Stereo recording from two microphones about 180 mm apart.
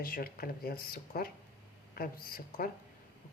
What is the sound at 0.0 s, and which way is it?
Speech, 55° left (ahead or behind).